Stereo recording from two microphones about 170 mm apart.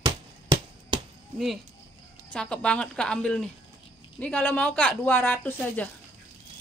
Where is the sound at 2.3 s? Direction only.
5° left (ahead or behind).